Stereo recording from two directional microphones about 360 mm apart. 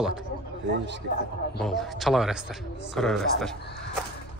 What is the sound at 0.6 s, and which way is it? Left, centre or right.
Speech, right.